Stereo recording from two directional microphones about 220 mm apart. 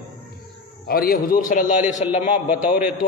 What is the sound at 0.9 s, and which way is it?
A man's voice, 40° left (ahead or behind).